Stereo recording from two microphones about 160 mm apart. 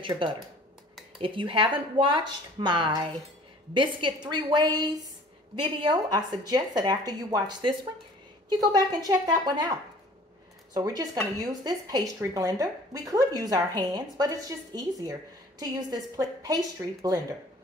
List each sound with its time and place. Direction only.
0.2 s speech: 30° right (ahead or behind)